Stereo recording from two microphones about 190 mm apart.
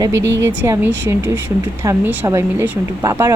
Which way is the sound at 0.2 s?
70° right (ahead or behind).